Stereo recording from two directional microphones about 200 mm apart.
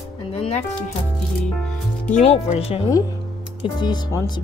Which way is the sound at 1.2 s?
5° left (ahead or behind).